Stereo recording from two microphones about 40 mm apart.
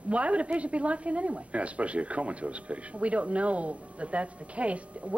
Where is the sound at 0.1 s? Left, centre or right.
Right.